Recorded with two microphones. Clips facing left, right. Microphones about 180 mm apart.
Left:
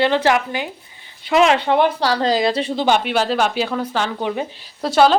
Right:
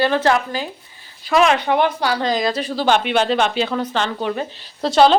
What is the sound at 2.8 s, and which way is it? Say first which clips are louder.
A woman's voice: right 2 dB; 10° left (ahead or behind).